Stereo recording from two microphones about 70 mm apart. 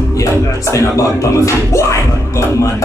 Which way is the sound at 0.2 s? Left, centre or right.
Left.